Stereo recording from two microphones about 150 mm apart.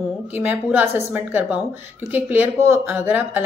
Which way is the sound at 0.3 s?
10° right (ahead or behind).